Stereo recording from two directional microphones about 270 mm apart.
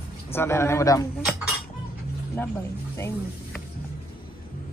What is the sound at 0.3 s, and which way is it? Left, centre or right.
Speech, centre.